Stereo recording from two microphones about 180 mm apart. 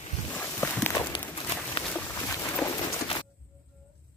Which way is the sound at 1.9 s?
10° left (ahead or behind).